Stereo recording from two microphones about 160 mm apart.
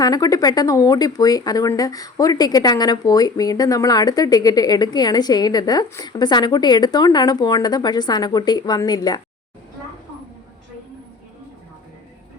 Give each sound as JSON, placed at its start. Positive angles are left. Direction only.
{"t": 0.0, "sound": "speech", "side_deg": 25}